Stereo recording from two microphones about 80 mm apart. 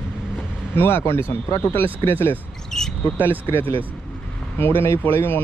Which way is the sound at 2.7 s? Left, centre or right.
Centre.